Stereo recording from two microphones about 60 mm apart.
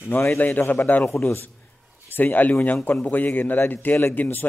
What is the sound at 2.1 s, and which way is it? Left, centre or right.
Speech, left.